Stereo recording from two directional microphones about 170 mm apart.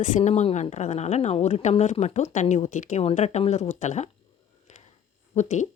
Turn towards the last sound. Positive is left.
turn(degrees=45)  # may be behind; listen again after turning